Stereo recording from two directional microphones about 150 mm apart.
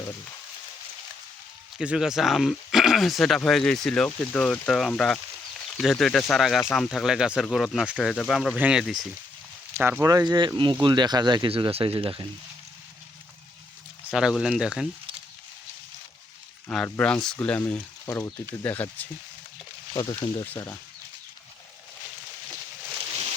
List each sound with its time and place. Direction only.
1.8 s speech: 5° right (ahead or behind)
8.5 s speech: 10° right (ahead or behind); by 12.3 s 35° right (ahead or behind)
14.1 s speech: 5° right (ahead or behind)
16.6 s speech: 5° left (ahead or behind)
19.9 s speech: 25° left (ahead or behind)